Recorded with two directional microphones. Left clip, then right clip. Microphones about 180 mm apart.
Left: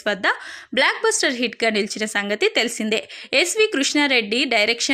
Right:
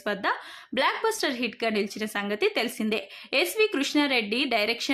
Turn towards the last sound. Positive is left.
turn(degrees=15)  # may be behind; listen again after turning